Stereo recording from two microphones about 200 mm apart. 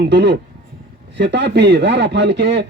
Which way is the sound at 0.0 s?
65° right (ahead or behind).